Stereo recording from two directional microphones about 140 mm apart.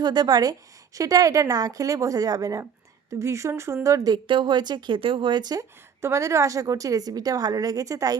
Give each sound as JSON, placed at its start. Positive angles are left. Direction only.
{"t": 0.0, "sound": "speech", "side_deg": -30}